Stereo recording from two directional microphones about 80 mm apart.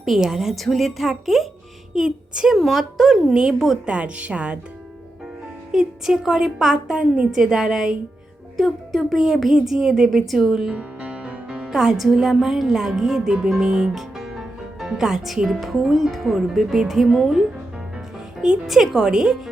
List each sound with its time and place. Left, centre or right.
0.0 s a woman's voice: centre
5.7 s a woman's voice: centre
10.7 s a woman's voice: centre